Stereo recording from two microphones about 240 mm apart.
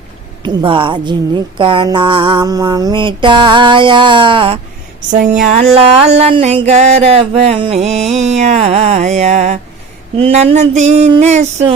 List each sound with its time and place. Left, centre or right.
0.4 s mantra: right
5.1 s speech: right
5.5 s mantra: right